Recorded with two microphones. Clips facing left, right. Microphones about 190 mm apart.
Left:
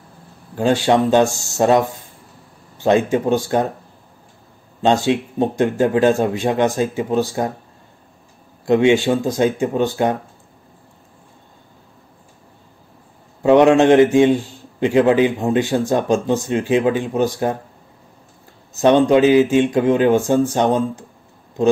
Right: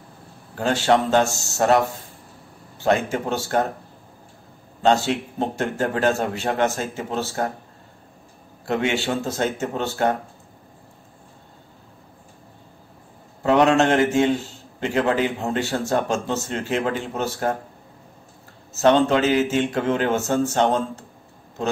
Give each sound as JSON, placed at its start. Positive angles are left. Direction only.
{"t": 0.6, "sound": "a man's voice", "side_deg": 20}
{"t": 1.3, "sound": "speech", "side_deg": -20}
{"t": 2.8, "sound": "a man's voice", "side_deg": 20}
{"t": 4.8, "sound": "a man's voice", "side_deg": 20}
{"t": 8.6, "sound": "a man's voice", "side_deg": 20}
{"t": 13.4, "sound": "a man's voice", "side_deg": 20}
{"t": 18.7, "sound": "a man's voice", "side_deg": 15}